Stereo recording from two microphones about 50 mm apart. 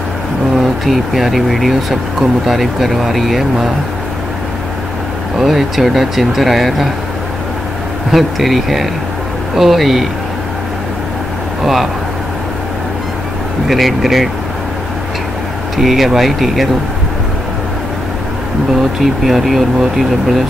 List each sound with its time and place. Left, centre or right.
0.8 s speech: centre
5.4 s speech: centre
8.1 s speech: centre
11.6 s speech: centre
13.7 s speech: centre
15.8 s speech: centre
18.8 s speech: centre